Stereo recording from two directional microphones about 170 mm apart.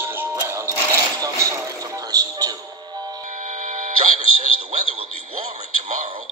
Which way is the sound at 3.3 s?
45° right (ahead or behind).